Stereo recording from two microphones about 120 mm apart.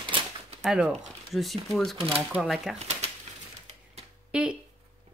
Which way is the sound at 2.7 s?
65° right (ahead or behind).